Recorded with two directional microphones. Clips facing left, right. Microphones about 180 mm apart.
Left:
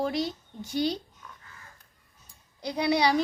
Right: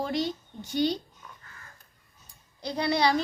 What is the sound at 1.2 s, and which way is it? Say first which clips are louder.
Crow: even; 5° right (ahead or behind).